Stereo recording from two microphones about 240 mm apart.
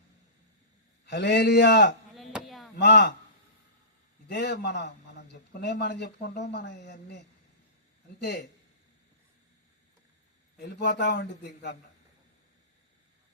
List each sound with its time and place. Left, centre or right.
1.0 s a man's voice: left
2.1 s chop: centre
2.7 s a man's voice: left
4.3 s a man's voice: left
8.2 s a man's voice: left
10.6 s a man's voice: left